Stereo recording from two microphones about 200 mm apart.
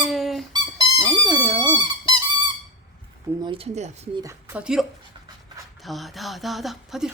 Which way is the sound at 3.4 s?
25° right (ahead or behind).